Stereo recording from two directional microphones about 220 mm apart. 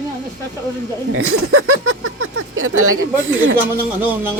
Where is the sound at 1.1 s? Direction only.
75° right (ahead or behind).